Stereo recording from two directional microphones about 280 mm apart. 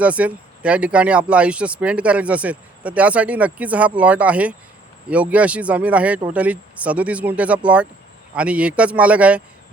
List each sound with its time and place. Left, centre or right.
0.0 s speech: centre